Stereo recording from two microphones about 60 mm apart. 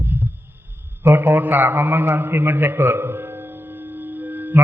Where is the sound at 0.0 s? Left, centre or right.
Right.